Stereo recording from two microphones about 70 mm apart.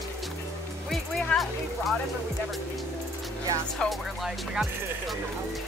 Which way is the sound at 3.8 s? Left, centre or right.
Centre.